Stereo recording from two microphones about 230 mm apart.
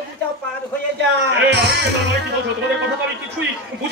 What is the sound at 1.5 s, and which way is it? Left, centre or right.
Speech, right.